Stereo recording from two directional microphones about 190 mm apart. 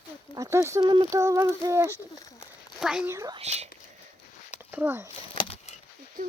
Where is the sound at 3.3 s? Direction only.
35° right (ahead or behind).